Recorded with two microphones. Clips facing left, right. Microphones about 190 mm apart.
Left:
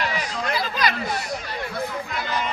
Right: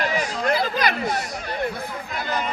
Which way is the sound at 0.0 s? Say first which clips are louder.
Right 3 dB; 50° right (ahead or behind).